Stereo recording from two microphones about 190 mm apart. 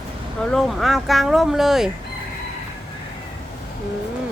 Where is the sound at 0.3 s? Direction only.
5° left (ahead or behind).